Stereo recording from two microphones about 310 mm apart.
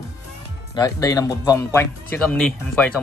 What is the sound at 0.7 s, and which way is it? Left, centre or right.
Speech, centre.